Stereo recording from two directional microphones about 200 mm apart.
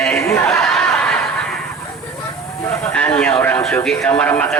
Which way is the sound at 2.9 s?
5° left (ahead or behind).